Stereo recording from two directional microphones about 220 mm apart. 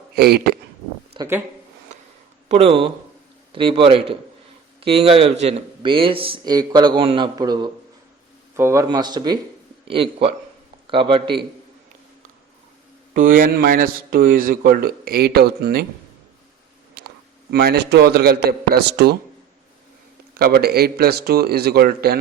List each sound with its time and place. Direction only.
0.2 s a man's voice: 45° right (ahead or behind)
1.2 s speech: 20° right (ahead or behind)
2.5 s speech: 25° right (ahead or behind)
13.1 s a man's voice: 40° right (ahead or behind)
17.0 s a sound: 45° right (ahead or behind)
17.5 s a man's voice: 45° right (ahead or behind)
20.3 s a man's voice: 45° right (ahead or behind)